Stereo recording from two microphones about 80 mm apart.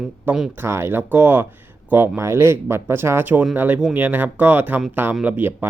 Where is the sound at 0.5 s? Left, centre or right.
Right.